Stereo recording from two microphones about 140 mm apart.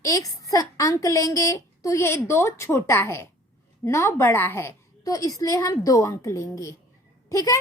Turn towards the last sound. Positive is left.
turn(degrees=25)  # may be behind; listen again after turning